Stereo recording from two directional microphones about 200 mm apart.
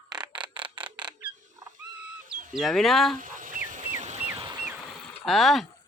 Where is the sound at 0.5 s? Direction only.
25° right (ahead or behind).